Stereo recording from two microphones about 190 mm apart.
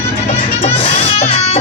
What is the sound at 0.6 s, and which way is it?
Music, 30° left (ahead or behind).